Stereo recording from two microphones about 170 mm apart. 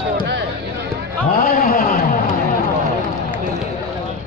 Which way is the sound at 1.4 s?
60° left (ahead or behind).